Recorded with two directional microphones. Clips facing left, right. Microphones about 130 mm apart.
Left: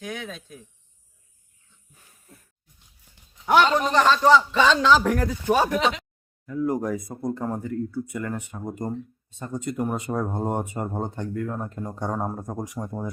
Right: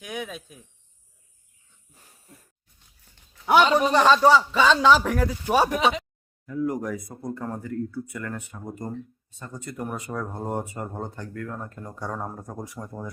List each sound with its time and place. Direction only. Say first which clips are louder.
0.0 s a man's voice: even; 10° right (ahead or behind)
3.4 s a man's voice: right 1 dB; 10° right (ahead or behind)
6.4 s speech: left 2 dB; 30° left (ahead or behind)